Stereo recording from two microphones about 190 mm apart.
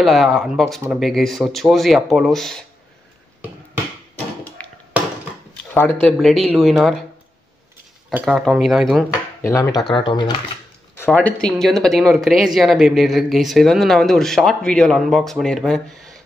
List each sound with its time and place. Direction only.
0.0 s speech: centre (ahead or behind)
4.6 s a sound: 5° left (ahead or behind)
5.8 s speech: 10° left (ahead or behind)
8.1 s speech: centre (ahead or behind)
9.1 s speech: 15° left (ahead or behind)
11.1 s speech: 5° left (ahead or behind)